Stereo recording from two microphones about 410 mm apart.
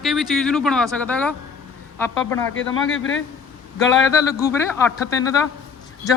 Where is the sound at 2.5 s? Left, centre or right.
Left.